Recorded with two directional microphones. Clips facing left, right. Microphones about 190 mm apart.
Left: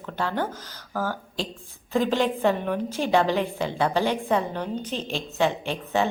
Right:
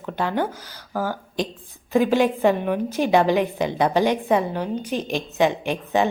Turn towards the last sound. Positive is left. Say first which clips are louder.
# right 4 dB
turn(degrees=-15)  # may be behind; listen again after turning